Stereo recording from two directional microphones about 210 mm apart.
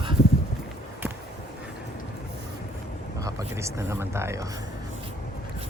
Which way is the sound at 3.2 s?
15° right (ahead or behind).